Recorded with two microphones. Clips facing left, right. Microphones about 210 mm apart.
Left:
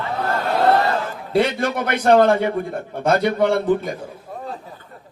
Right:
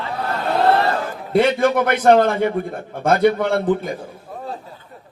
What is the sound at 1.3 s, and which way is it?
Speech, 55° right (ahead or behind).